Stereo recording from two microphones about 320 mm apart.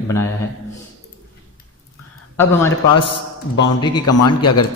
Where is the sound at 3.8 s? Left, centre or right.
Centre.